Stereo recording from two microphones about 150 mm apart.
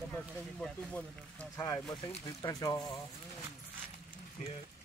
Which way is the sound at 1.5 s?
25° left (ahead or behind).